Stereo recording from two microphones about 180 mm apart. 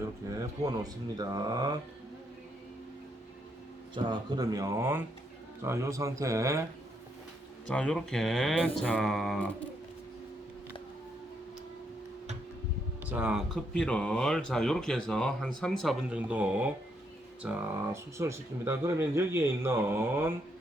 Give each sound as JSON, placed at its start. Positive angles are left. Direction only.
{"t": 0.0, "sound": "speech", "side_deg": -20}
{"t": 3.9, "sound": "speech", "side_deg": -25}
{"t": 7.7, "sound": "speech", "side_deg": 5}
{"t": 13.1, "sound": "speech", "side_deg": -5}